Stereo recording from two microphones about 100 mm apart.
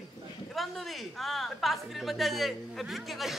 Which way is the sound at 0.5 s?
Centre (ahead or behind).